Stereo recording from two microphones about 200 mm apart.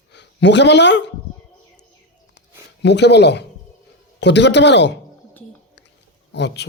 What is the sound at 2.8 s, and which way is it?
Speech, 60° left (ahead or behind).